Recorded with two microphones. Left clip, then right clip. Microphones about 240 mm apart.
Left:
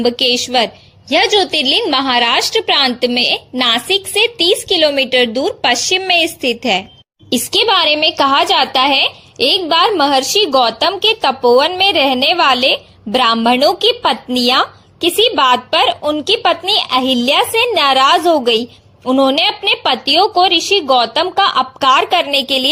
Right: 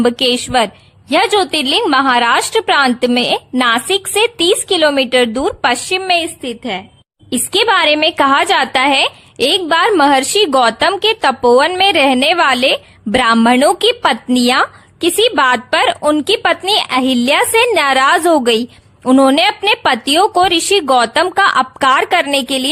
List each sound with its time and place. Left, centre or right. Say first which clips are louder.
0.0 s a woman's voice: even; right
6.1 s a woman's voice: left 1 dB; centre
7.5 s a woman's voice: right 1 dB; right